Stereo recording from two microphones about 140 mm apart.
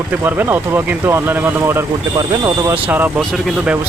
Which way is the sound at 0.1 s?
15° right (ahead or behind).